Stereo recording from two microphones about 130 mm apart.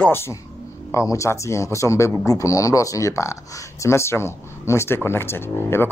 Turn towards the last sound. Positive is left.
turn(degrees=15)  # may be behind; listen again after turning